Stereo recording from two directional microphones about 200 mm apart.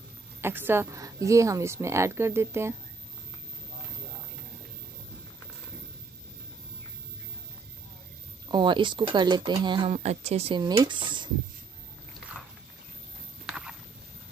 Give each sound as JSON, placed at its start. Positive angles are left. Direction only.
{"t": 0.4, "sound": "a woman's voice", "side_deg": -10}
{"t": 8.5, "sound": "speech", "side_deg": -25}
{"t": 13.5, "sound": "a sound", "side_deg": -5}